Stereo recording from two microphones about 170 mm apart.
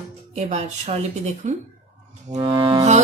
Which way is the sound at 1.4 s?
45° right (ahead or behind).